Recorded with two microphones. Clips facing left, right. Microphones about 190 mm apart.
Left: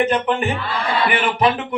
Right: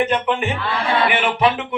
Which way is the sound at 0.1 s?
40° left (ahead or behind).